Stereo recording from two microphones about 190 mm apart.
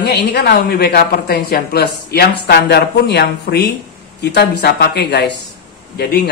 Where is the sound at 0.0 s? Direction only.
60° left (ahead or behind).